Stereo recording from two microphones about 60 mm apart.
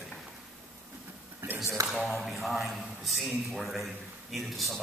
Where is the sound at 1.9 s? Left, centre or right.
Centre.